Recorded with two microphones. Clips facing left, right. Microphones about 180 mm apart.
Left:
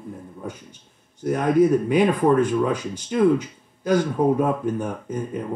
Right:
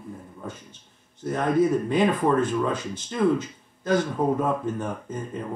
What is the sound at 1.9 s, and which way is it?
Speech, 10° left (ahead or behind).